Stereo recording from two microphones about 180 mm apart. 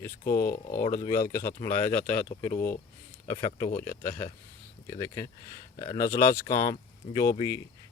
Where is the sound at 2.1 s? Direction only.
45° left (ahead or behind).